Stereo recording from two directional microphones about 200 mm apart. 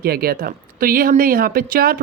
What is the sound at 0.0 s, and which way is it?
Speech, 50° right (ahead or behind).